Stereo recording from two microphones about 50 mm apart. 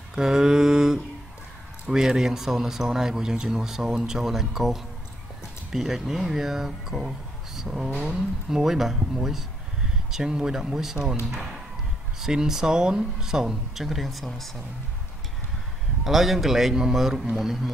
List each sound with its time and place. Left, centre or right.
0.1 s mantra: centre
1.9 s speech: centre
12.2 s speech: centre
16.0 s a man's voice: centre